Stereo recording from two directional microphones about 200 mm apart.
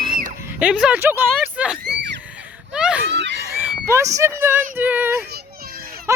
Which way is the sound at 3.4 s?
10° right (ahead or behind).